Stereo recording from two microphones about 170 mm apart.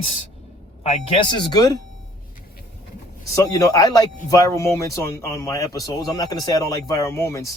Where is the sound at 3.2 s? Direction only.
20° left (ahead or behind).